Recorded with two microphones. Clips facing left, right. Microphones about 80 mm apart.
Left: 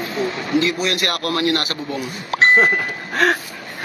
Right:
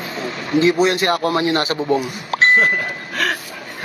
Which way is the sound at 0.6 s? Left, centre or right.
Right.